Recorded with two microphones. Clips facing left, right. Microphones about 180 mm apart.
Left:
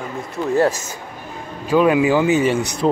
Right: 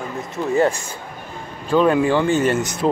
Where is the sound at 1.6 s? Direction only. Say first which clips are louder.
Left 1 dB; 10° left (ahead or behind).